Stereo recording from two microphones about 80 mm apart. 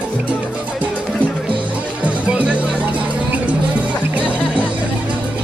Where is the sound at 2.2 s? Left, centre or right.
Centre.